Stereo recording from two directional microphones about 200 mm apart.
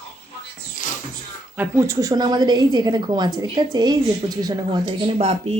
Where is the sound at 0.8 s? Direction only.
40° left (ahead or behind).